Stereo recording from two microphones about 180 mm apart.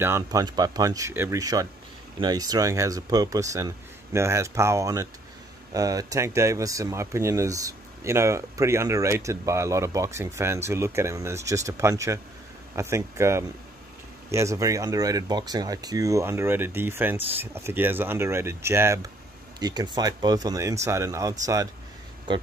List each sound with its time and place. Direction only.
0.0 s speech: 15° right (ahead or behind)